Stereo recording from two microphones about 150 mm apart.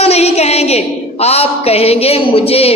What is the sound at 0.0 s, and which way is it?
A woman's voice, 45° left (ahead or behind).